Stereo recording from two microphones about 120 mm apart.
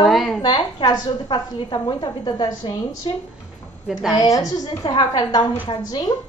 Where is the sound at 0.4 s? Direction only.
45° left (ahead or behind).